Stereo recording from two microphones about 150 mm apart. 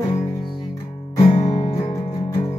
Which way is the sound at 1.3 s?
25° left (ahead or behind).